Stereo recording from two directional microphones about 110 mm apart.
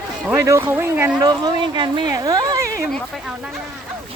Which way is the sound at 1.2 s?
35° right (ahead or behind).